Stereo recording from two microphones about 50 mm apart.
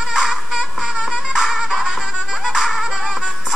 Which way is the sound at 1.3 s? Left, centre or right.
Centre.